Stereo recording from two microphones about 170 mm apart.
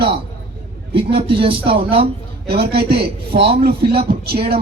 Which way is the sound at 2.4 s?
70° right (ahead or behind).